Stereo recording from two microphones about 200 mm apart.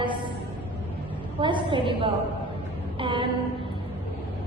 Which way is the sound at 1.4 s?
25° right (ahead or behind).